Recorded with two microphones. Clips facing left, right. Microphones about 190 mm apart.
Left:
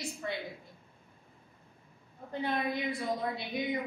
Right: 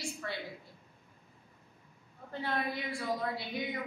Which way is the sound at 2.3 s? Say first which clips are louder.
Left 3 dB; 20° left (ahead or behind).